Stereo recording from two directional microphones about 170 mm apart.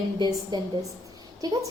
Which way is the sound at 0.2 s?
25° right (ahead or behind).